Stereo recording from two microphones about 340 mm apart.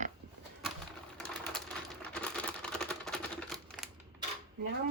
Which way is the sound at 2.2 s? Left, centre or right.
Centre.